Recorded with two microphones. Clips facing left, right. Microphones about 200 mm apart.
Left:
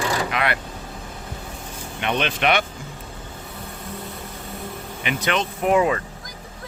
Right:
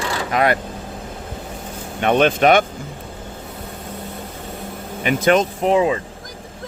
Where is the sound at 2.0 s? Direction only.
45° right (ahead or behind).